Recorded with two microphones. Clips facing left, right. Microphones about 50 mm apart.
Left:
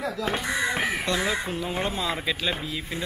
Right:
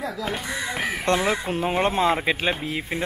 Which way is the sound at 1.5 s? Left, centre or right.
Right.